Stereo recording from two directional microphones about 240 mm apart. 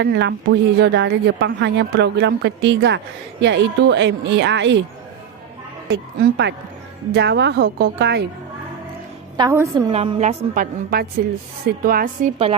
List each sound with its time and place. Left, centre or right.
0.0 s a woman's voice: right
5.9 s a woman's voice: right
9.4 s a woman's voice: centre
9.9 s a woman's voice: right